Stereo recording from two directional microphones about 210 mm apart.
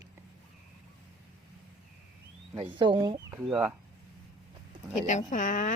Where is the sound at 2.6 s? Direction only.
25° right (ahead or behind).